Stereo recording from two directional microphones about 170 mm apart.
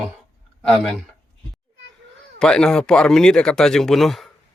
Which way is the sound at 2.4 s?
5° left (ahead or behind).